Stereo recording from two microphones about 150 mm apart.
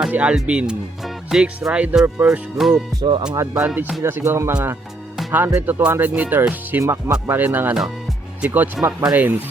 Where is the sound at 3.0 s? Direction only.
30° right (ahead or behind).